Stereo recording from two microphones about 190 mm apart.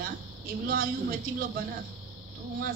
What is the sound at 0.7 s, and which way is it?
Speech, 50° right (ahead or behind).